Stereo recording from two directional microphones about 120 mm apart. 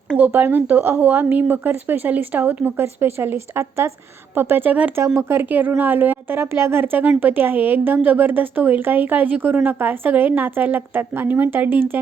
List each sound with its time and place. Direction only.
0.3 s a woman's voice: 15° right (ahead or behind)